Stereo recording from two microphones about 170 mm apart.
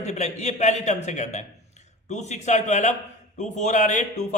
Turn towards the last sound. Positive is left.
turn(degrees=45)  # may be behind; listen again after turning